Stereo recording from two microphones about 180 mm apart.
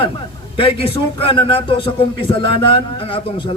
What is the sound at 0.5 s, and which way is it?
A man's voice, 30° left (ahead or behind).